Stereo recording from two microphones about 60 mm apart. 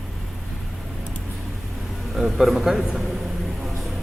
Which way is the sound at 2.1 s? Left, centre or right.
Centre.